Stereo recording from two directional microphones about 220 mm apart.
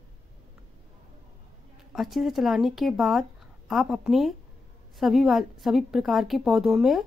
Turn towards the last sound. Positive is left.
turn(degrees=0)  # may be behind; listen again after turning